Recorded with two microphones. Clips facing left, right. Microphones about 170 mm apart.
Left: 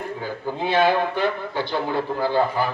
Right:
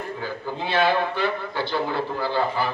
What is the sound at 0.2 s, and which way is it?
A man's voice, 15° left (ahead or behind).